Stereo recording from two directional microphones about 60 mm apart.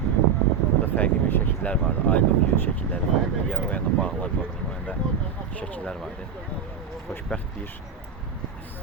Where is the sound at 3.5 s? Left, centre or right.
Left.